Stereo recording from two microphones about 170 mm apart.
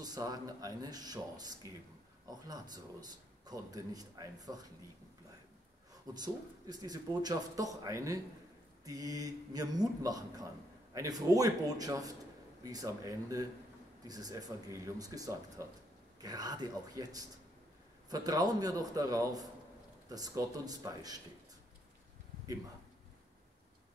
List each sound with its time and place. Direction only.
0.0 s speech: 25° right (ahead or behind)
2.4 s speech: 20° right (ahead or behind)
6.1 s speech: 25° right (ahead or behind)
18.1 s speech: 20° right (ahead or behind)